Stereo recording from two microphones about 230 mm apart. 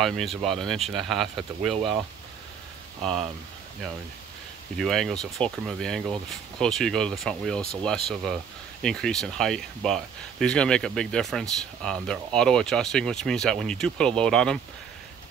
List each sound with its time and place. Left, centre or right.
0.0 s speech: centre
3.0 s speech: centre
4.7 s speech: centre